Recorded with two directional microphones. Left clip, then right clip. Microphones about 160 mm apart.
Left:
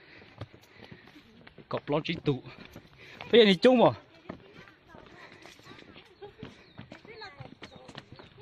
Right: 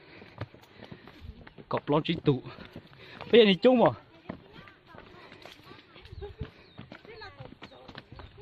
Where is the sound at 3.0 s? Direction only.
20° right (ahead or behind).